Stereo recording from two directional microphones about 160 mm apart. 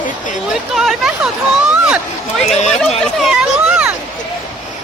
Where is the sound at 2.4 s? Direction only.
45° left (ahead or behind).